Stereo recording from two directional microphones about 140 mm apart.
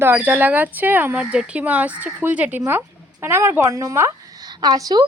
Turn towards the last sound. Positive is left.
turn(degrees=-30)  # may be behind; listen again after turning